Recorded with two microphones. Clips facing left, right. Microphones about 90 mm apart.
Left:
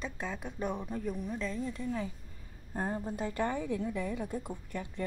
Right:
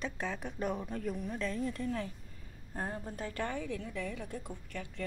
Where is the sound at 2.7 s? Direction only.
15° left (ahead or behind).